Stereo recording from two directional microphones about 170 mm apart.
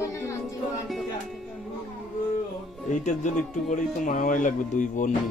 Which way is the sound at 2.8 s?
45° left (ahead or behind).